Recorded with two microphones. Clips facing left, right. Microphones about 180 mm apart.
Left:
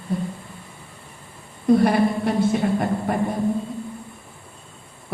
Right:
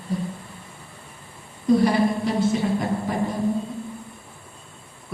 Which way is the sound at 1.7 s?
55° left (ahead or behind).